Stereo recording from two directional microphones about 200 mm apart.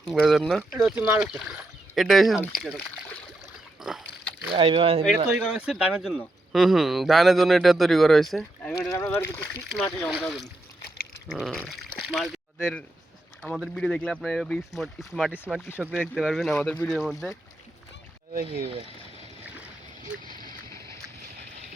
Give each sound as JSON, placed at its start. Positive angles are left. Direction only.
{"t": 0.0, "sound": "speech", "side_deg": 0}
{"t": 2.6, "sound": "a sound", "side_deg": 5}
{"t": 3.8, "sound": "pig", "side_deg": 0}
{"t": 4.5, "sound": "speech", "side_deg": -25}
{"t": 5.5, "sound": "speech", "side_deg": 0}
{"t": 8.8, "sound": "boat", "side_deg": 15}
{"t": 9.7, "sound": "speech", "side_deg": 5}
{"t": 18.4, "sound": "speech", "side_deg": -30}
{"t": 20.1, "sound": "speech", "side_deg": -5}